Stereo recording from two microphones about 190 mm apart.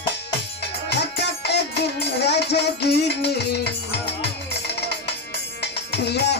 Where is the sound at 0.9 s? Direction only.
60° left (ahead or behind).